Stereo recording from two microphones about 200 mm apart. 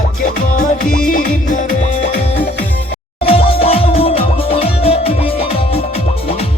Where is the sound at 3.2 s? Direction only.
30° left (ahead or behind).